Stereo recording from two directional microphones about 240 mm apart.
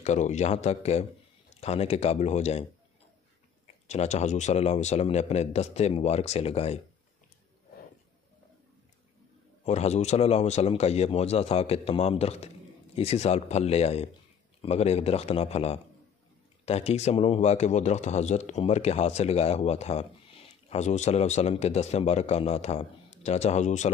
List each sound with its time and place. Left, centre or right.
0.0 s a man's voice: left
3.6 s a man's voice: left
9.7 s a man's voice: left